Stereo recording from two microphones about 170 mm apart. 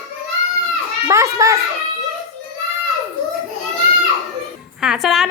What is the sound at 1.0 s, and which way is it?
Speech, 20° right (ahead or behind).